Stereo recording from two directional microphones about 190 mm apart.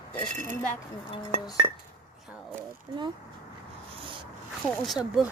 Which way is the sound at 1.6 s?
35° right (ahead or behind).